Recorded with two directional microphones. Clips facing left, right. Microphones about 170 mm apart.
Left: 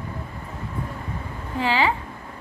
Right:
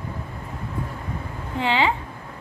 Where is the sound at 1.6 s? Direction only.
20° right (ahead or behind).